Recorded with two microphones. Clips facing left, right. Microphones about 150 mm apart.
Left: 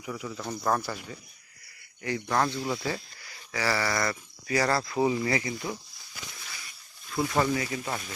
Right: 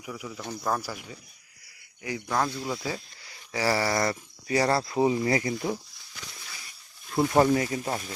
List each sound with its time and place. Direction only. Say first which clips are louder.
0.0 s speech: left 2 dB; 5° right (ahead or behind)
2.0 s speech: left 1 dB; 10° right (ahead or behind)
3.2 s a sound: right 2 dB; 25° right (ahead or behind)
3.6 s speech: right 3 dB; 35° right (ahead or behind)
7.1 s speech: right 5 dB; 35° right (ahead or behind)